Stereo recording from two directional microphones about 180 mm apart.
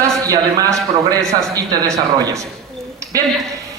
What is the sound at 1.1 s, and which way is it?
A man's voice, 20° right (ahead or behind).